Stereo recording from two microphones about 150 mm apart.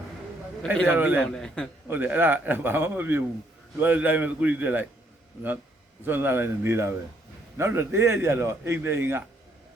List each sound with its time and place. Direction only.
0.9 s a man's voice: 10° right (ahead or behind)
1.2 s a man's voice: 5° left (ahead or behind)
1.9 s a man's voice: 10° right (ahead or behind)
6.1 s a man's voice: 15° right (ahead or behind)